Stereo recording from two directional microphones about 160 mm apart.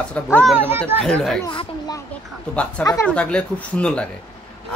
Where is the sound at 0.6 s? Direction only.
15° right (ahead or behind).